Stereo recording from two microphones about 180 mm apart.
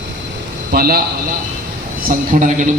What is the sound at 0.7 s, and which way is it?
Speech, 55° right (ahead or behind).